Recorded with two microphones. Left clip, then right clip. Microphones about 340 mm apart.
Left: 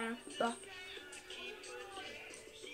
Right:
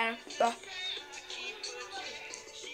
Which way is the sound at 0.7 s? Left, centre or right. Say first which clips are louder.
Right 10 dB; right.